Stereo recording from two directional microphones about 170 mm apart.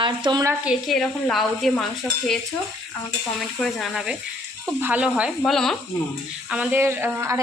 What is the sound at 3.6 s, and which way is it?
Stir, centre (ahead or behind).